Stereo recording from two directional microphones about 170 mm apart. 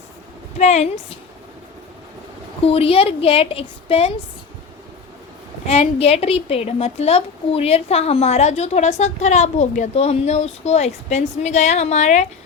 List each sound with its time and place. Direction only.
0.6 s a woman's voice: 40° left (ahead or behind)
2.6 s a woman's voice: 35° left (ahead or behind)
5.6 s a woman's voice: 35° left (ahead or behind)